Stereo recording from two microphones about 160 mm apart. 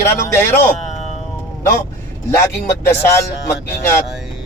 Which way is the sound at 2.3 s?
15° left (ahead or behind).